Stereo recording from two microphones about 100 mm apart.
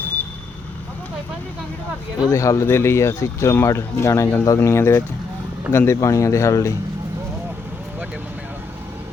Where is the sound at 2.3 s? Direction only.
30° left (ahead or behind).